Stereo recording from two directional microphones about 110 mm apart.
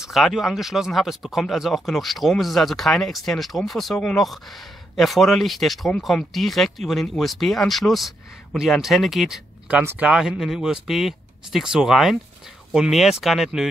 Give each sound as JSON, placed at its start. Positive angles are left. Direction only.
{"t": 0.0, "sound": "speech", "side_deg": 0}
{"t": 9.7, "sound": "speech", "side_deg": -15}